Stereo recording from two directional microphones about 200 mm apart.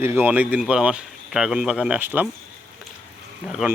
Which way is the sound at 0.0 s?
10° right (ahead or behind).